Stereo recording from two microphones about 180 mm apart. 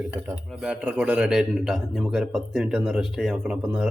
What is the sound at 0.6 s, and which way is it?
A man's voice, 5° right (ahead or behind).